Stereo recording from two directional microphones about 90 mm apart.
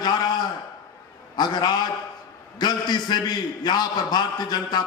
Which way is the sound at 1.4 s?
50° left (ahead or behind).